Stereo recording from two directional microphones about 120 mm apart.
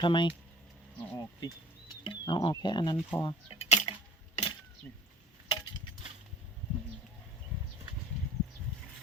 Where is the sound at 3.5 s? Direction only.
65° left (ahead or behind).